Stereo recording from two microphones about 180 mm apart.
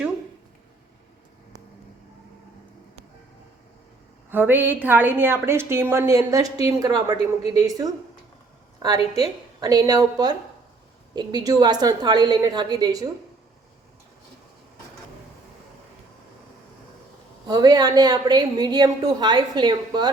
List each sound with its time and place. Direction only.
4.3 s a woman's voice: 10° right (ahead or behind)
9.1 s a woman's voice: 20° right (ahead or behind)
17.5 s a woman's voice: 20° right (ahead or behind)